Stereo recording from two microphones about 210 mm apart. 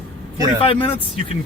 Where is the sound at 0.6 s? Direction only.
25° left (ahead or behind).